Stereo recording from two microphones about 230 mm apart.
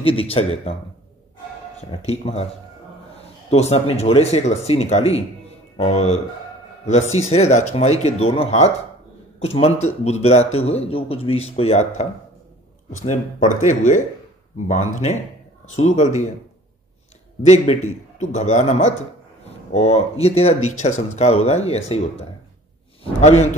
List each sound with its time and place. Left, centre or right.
0.0 s speech: left
1.8 s speech: left
3.4 s speech: left
17.5 s speech: left
23.2 s speech: left